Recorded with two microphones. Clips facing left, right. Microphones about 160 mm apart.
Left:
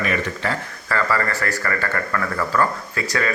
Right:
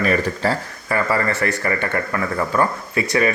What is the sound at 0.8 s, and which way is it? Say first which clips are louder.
Speech: right 2 dB; 20° right (ahead or behind).